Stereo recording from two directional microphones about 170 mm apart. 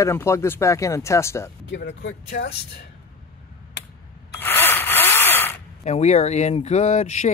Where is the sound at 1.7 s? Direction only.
85° left.